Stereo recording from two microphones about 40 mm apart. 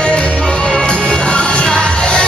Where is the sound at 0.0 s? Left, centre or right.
Left.